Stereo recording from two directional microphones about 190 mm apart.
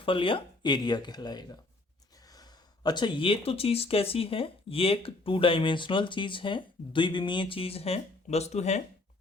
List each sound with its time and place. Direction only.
0.0 s speech: 25° left (ahead or behind)